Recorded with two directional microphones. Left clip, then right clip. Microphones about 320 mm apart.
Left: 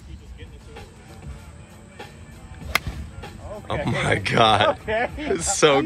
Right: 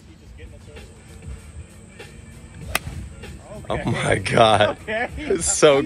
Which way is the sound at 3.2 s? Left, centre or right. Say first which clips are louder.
Left 3 dB; left.